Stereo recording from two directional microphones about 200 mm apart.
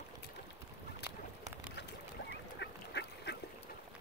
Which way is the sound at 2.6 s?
60° left (ahead or behind).